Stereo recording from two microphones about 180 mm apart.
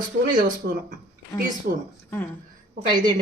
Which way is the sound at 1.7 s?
55° right (ahead or behind).